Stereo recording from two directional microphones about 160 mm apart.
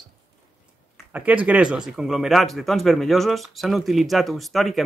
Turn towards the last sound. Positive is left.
turn(degrees=0)  # may be behind; listen again after turning